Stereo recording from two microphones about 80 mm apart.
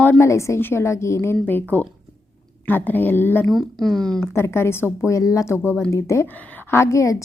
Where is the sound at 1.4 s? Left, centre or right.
Left.